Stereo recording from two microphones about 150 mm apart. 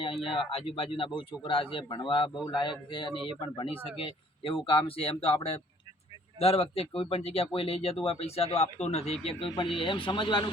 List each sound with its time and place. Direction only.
0.0 s speech: 35° left (ahead or behind)
9.5 s speech: 35° left (ahead or behind)